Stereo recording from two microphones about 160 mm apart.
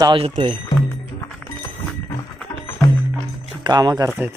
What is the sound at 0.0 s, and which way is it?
Speech, 30° right (ahead or behind).